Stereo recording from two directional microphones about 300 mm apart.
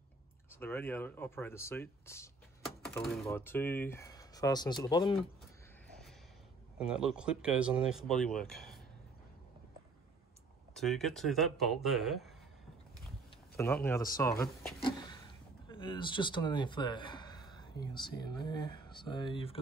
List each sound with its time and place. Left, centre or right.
0.5 s speech: centre
6.8 s speech: centre
10.7 s speech: centre
13.6 s speech: centre